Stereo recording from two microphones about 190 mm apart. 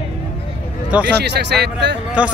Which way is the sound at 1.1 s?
60° right (ahead or behind).